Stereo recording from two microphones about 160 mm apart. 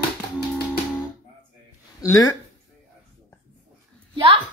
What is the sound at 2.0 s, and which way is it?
Speech, 15° left (ahead or behind).